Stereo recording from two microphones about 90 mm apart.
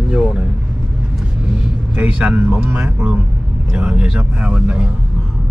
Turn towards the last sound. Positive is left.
turn(degrees=-10)  # may be behind; listen again after turning